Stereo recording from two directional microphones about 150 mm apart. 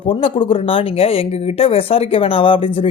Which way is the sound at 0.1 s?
35° left (ahead or behind).